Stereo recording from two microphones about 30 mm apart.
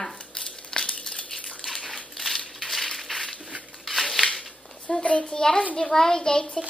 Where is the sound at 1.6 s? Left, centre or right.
Centre.